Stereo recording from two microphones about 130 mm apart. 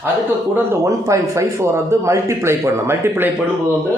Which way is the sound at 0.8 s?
25° right (ahead or behind).